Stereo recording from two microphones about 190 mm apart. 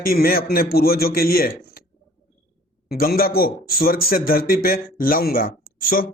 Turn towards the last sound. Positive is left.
turn(degrees=50)  # may be behind; listen again after turning